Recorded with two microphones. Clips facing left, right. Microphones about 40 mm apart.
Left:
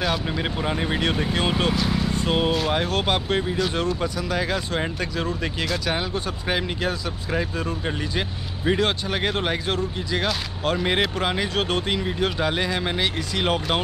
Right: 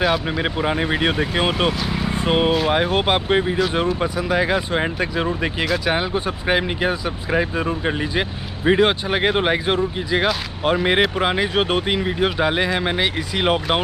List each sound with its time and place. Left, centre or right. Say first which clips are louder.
0.0 s speech: right 5 dB; centre
1.7 s speech: even; centre
2.0 s vehicle: right 8 dB; right
2.7 s speech: right 5 dB; right